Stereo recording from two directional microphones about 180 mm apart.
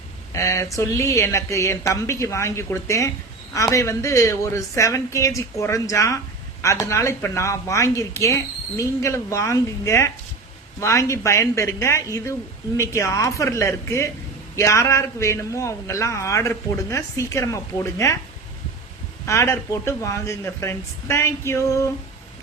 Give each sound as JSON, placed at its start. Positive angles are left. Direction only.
{"t": 0.3, "sound": "a man's voice", "side_deg": 15}
{"t": 19.2, "sound": "a man's voice", "side_deg": 15}